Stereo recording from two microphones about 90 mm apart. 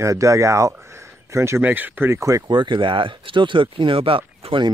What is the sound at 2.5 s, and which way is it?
Speech, 60° right (ahead or behind).